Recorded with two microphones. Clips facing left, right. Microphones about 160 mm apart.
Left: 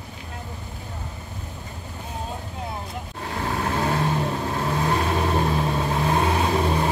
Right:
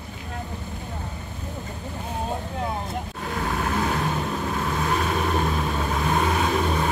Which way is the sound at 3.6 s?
30° left (ahead or behind).